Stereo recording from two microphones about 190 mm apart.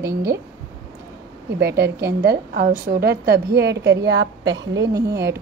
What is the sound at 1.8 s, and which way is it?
A woman's voice, 55° right (ahead or behind).